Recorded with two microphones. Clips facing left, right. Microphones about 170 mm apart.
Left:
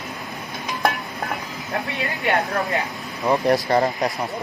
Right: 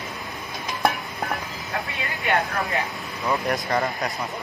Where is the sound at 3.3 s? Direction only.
30° left (ahead or behind).